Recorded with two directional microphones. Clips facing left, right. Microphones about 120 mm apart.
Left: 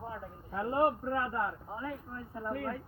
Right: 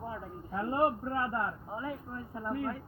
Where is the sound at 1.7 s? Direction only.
10° right (ahead or behind).